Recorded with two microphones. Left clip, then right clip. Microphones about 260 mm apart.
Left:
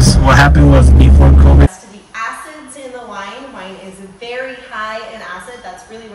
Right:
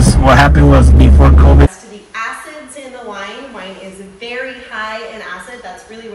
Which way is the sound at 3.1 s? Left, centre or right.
Left.